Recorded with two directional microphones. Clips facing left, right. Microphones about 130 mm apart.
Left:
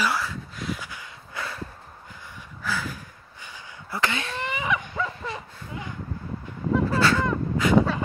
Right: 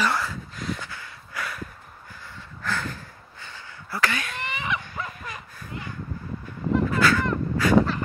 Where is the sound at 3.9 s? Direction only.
20° left (ahead or behind).